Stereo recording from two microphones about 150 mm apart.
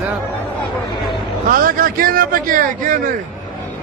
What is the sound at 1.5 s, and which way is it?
Speech, 70° right (ahead or behind).